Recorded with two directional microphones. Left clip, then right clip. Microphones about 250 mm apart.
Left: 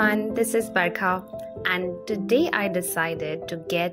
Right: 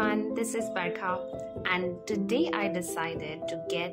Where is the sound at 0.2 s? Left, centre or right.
Centre.